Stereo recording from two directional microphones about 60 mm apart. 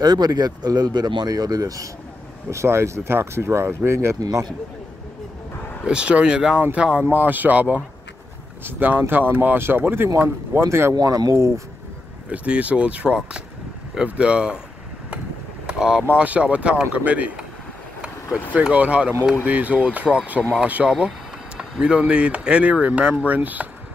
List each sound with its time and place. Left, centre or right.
0.1 s speech: right
2.5 s speech: right
4.2 s a man's voice: right
5.9 s speech: centre
7.1 s speech: right
11.0 s speech: right
11.3 s speech: right
12.3 s speech: right
15.6 s vehicle: centre
16.2 s speech: right
18.5 s speech: right
21.5 s speech: centre